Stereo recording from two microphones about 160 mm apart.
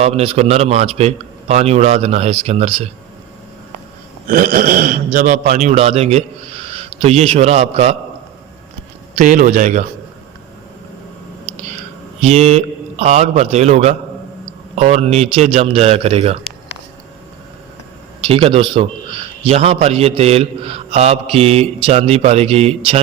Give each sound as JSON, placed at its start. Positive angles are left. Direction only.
{"t": 0.0, "sound": "a man's voice", "side_deg": -40}
{"t": 4.3, "sound": "a man's voice", "side_deg": -60}
{"t": 9.1, "sound": "a man's voice", "side_deg": -55}
{"t": 12.2, "sound": "a man's voice", "side_deg": -40}
{"t": 18.3, "sound": "a man's voice", "side_deg": -35}